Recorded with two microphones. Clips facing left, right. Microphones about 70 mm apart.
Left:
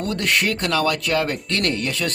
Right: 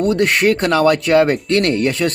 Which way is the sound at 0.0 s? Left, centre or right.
Right.